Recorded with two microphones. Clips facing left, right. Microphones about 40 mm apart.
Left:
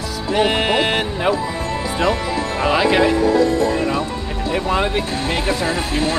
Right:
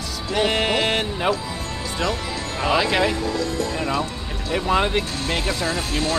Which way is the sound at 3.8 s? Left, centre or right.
Centre.